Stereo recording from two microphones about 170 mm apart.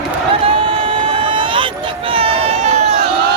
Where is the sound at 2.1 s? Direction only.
35° right (ahead or behind).